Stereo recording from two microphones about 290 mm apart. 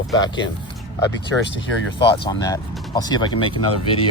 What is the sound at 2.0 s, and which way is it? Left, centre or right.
Speech, centre.